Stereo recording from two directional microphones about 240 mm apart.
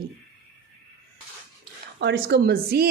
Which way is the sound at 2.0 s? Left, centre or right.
Right.